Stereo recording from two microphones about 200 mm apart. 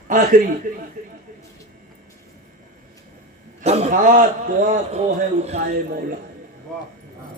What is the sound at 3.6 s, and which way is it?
A man's voice, 30° right (ahead or behind).